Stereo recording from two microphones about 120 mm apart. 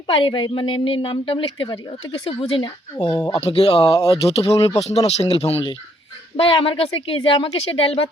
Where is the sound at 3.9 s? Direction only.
30° left (ahead or behind).